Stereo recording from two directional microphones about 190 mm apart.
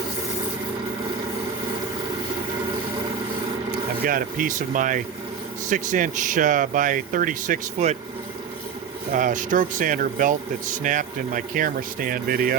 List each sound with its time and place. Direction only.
4.0 s speech: 45° right (ahead or behind)
9.1 s speech: 45° right (ahead or behind)